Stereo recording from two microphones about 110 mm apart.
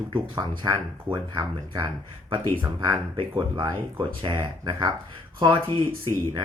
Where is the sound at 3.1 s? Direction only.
50° right (ahead or behind).